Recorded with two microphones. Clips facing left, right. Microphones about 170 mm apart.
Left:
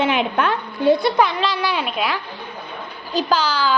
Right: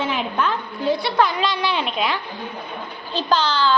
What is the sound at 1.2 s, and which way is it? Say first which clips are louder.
A child's voice: left 1 dB; centre (ahead or behind).